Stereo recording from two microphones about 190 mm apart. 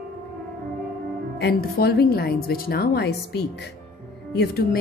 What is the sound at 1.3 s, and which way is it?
A woman's voice, 55° left (ahead or behind).